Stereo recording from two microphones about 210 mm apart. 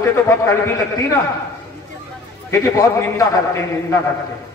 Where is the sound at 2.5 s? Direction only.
15° left (ahead or behind).